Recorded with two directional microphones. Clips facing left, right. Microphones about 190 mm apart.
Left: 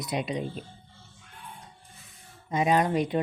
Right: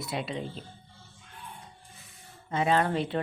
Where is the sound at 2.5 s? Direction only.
15° left (ahead or behind).